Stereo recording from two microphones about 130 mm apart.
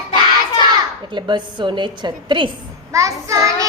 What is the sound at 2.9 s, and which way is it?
Speech, 25° right (ahead or behind).